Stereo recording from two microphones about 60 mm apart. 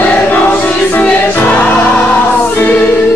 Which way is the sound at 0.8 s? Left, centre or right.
Left.